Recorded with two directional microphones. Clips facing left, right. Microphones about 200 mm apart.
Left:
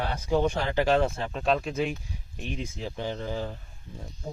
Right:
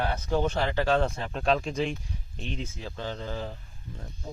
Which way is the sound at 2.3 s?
15° left (ahead or behind).